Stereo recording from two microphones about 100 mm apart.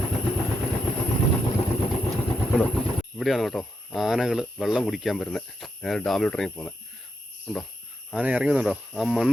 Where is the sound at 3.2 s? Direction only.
Centre (ahead or behind).